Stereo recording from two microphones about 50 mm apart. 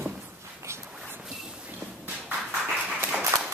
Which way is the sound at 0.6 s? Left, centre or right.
Right.